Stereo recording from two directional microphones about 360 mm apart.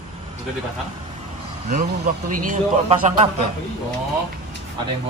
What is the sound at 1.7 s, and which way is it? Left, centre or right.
Speech, right.